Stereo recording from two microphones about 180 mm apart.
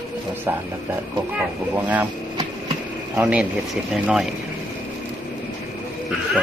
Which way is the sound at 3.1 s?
5° right (ahead or behind).